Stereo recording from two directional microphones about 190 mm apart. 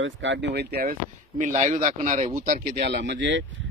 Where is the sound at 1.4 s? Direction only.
40° right (ahead or behind).